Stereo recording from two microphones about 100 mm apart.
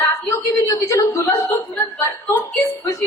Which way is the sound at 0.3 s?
35° left (ahead or behind).